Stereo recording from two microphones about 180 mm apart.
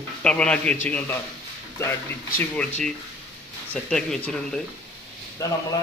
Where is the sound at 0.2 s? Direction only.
5° left (ahead or behind).